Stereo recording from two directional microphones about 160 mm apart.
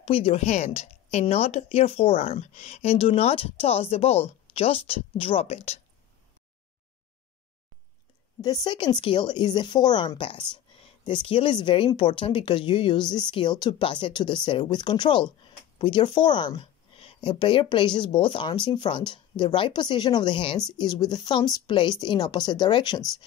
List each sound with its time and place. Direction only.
0.0 s a woman's voice: 35° left (ahead or behind)
8.4 s a woman's voice: 25° left (ahead or behind)